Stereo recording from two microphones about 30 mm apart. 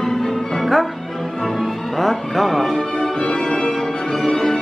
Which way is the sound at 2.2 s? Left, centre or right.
Centre.